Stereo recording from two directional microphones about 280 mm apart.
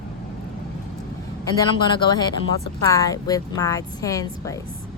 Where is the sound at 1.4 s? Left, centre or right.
Centre.